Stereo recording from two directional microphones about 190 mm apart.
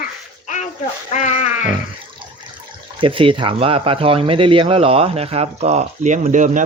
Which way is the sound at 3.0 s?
25° right (ahead or behind).